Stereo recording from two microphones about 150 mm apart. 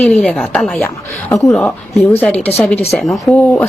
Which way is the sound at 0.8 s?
20° left (ahead or behind).